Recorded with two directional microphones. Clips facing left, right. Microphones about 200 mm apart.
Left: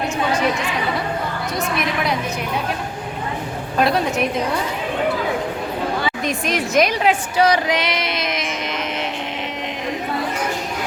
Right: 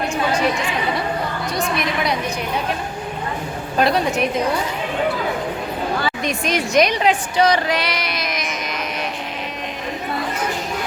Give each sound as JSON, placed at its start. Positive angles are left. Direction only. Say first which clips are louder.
{"t": 1.5, "sound": "a woman's voice", "louder": "even", "side_deg": 5}
{"t": 3.8, "sound": "a woman's voice", "louder": "even", "side_deg": 0}
{"t": 6.2, "sound": "a woman's voice", "louder": "even", "side_deg": 0}
{"t": 7.7, "sound": "child singing", "louder": "left 1 dB", "side_deg": 20}